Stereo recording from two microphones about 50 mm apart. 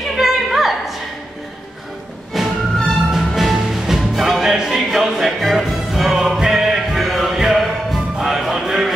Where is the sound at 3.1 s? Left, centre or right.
Centre.